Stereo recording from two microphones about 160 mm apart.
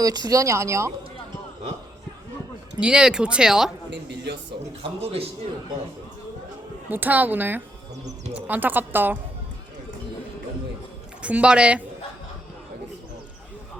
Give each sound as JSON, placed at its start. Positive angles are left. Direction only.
{"t": 0.0, "sound": "speech", "side_deg": -25}
{"t": 2.8, "sound": "speech", "side_deg": -5}
{"t": 3.8, "sound": "a man's voice", "side_deg": -90}
{"t": 4.8, "sound": "a man's voice", "side_deg": -40}
{"t": 6.9, "sound": "speech", "side_deg": -10}
{"t": 8.0, "sound": "speech", "side_deg": -45}
{"t": 8.4, "sound": "speech", "side_deg": -10}
{"t": 11.2, "sound": "speech", "side_deg": -10}